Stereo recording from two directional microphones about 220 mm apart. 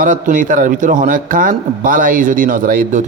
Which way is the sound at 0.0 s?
35° right (ahead or behind).